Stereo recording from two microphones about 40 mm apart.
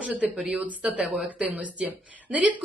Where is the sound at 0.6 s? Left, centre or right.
Right.